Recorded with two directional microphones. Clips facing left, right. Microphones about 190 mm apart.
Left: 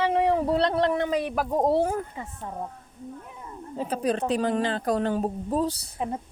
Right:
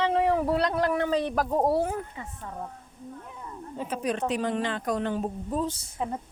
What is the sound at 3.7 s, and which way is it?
A woman's voice, 35° left (ahead or behind).